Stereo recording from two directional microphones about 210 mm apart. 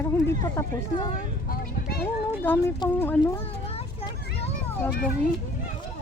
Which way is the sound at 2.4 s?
10° left (ahead or behind).